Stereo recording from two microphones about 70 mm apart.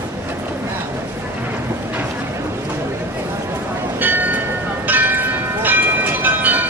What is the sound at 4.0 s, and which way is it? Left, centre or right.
Train, right.